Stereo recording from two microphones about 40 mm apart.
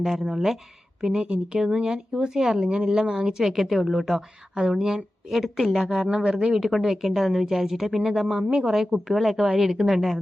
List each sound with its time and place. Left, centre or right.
0.0 s speech: centre
3.4 s speech: centre
4.5 s speech: centre
5.9 s speech: centre
6.6 s speech: centre